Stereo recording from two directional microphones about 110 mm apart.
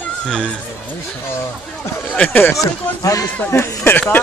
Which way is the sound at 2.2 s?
15° left (ahead or behind).